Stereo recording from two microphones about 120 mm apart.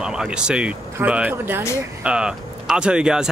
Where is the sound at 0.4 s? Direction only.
10° right (ahead or behind).